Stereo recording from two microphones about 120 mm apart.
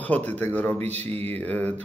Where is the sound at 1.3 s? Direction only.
15° left (ahead or behind).